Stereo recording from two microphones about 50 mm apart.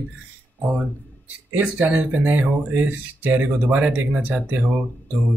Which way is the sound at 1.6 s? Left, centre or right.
Right.